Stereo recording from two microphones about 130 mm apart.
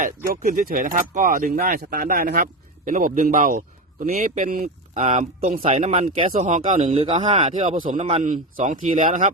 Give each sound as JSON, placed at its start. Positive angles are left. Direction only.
{"t": 0.0, "sound": "speech", "side_deg": -90}
{"t": 4.0, "sound": "speech", "side_deg": -90}
{"t": 5.8, "sound": "speech", "side_deg": -70}
{"t": 6.1, "sound": "speech", "side_deg": -60}
{"t": 6.9, "sound": "speech", "side_deg": -55}
{"t": 7.5, "sound": "speech", "side_deg": -65}